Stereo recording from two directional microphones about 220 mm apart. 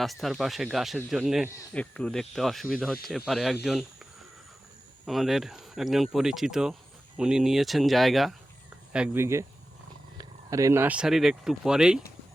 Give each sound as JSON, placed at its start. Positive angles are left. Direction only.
{"t": 0.0, "sound": "speech", "side_deg": 0}
{"t": 5.0, "sound": "speech", "side_deg": 0}